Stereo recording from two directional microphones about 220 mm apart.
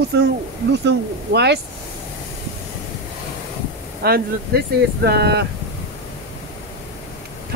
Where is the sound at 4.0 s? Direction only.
45° right (ahead or behind).